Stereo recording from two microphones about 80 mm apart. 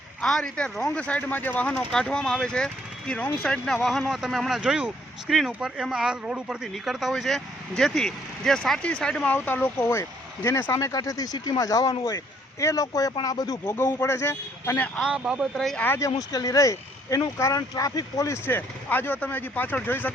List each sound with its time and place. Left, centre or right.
0.2 s speech: centre
1.6 s speech: centre
3.8 s speech: centre
9.3 s speech: left
13.7 s a man's voice: left
15.0 s speech: centre
15.5 s speech: centre
16.0 s speech: left
18.4 s speech: left